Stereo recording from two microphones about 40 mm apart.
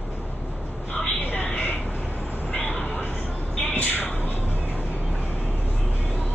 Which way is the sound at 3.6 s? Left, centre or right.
Left.